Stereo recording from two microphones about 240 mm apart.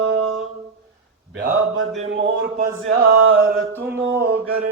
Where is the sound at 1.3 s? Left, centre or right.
Right.